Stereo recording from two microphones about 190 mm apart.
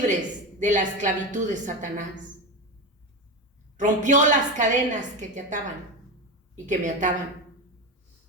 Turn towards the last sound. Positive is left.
turn(degrees=-40)  # may be behind; listen again after turning